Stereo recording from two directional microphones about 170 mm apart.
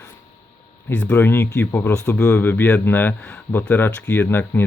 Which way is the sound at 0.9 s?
10° left (ahead or behind).